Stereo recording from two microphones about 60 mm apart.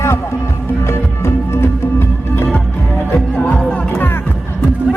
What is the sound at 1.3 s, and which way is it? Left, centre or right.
Music, left.